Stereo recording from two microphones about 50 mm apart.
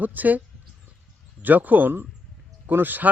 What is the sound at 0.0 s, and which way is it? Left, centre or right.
Speech, right.